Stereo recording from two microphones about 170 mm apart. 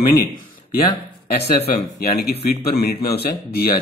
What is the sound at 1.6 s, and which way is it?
Speech, 65° left (ahead or behind).